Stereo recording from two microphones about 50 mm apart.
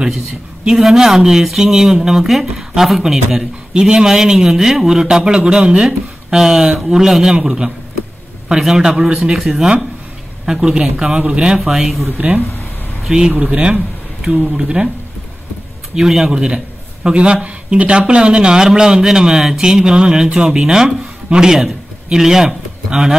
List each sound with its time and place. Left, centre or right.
0.7 s a man's voice: centre
6.3 s a man's voice: centre
13.4 s speech: right
13.7 s speech: centre
15.9 s a man's voice: centre